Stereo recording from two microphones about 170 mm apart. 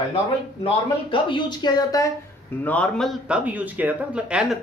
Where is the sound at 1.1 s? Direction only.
30° left (ahead or behind).